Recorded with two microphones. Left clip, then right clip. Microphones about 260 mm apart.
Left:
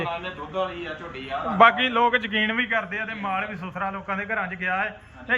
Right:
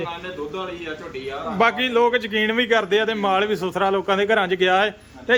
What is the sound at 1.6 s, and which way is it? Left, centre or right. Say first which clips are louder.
A man's voice: left 1 dB; centre.